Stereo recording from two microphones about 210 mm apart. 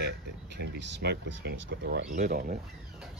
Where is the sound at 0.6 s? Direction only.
50° right (ahead or behind).